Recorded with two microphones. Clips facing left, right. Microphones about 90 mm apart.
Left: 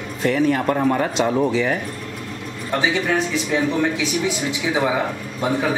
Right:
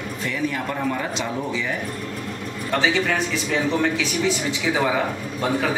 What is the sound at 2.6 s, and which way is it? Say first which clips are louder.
A man's voice: left 1 dB; 15° left (ahead or behind).